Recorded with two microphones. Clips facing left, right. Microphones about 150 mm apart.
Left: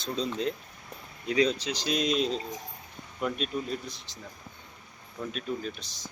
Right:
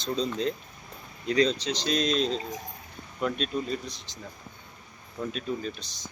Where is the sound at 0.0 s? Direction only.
5° left (ahead or behind).